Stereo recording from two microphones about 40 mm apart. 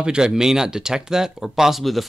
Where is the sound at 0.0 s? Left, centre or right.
Right.